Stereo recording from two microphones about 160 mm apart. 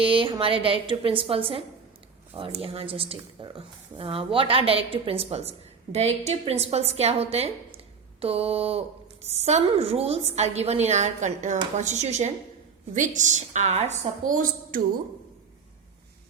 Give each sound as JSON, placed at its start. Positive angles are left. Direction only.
{"t": 0.0, "sound": "a woman's voice", "side_deg": -35}